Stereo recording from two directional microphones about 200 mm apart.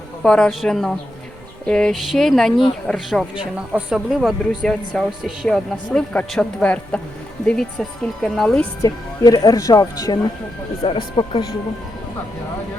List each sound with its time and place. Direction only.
0.2 s speech: 5° left (ahead or behind)
8.8 s speech: 20° left (ahead or behind)